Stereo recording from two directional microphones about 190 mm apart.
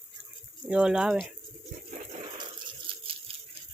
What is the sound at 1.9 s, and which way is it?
Water, 40° right (ahead or behind).